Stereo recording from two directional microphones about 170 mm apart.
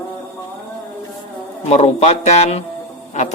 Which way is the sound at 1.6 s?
35° left (ahead or behind).